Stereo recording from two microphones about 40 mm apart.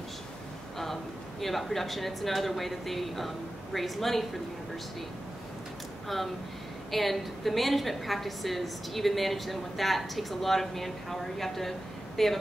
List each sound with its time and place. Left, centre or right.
1.4 s a woman's voice: centre
6.0 s a woman's voice: centre